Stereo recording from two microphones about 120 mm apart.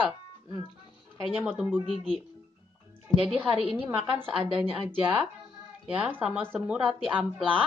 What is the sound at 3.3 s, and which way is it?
A woman's voice, 5° right (ahead or behind).